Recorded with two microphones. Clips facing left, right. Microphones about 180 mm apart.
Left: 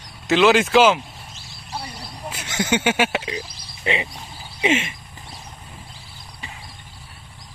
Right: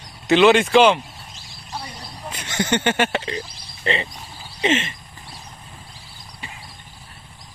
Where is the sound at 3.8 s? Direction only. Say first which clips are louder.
Even; 10° left (ahead or behind).